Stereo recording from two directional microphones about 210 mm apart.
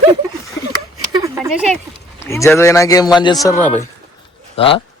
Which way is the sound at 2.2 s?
15° left (ahead or behind).